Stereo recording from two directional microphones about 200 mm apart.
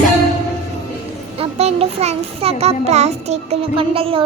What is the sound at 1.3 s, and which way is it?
Child singing, 30° right (ahead or behind).